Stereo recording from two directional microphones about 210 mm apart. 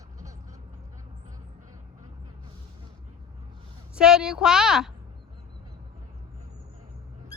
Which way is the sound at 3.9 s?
5° right (ahead or behind).